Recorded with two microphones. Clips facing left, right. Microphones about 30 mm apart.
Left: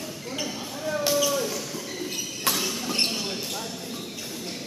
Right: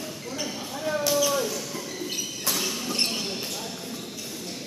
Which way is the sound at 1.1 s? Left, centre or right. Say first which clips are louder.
Even; centre.